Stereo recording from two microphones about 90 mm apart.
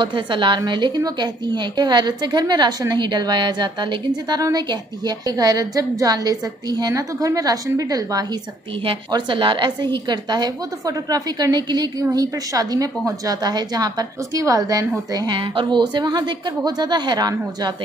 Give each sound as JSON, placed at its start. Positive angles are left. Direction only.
{"t": 0.0, "sound": "a woman's voice", "side_deg": -65}
{"t": 9.1, "sound": "speech", "side_deg": -65}
{"t": 10.0, "sound": "a woman's voice", "side_deg": -50}
{"t": 15.3, "sound": "a woman's voice", "side_deg": -65}